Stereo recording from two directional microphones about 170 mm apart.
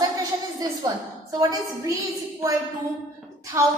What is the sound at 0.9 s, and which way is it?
A woman's voice, 20° right (ahead or behind).